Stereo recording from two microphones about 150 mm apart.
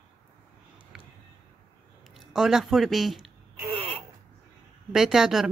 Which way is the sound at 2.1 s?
5° right (ahead or behind).